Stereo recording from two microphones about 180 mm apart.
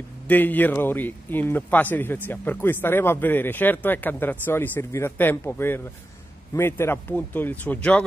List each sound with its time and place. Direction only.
0.3 s a man's voice: 10° left (ahead or behind)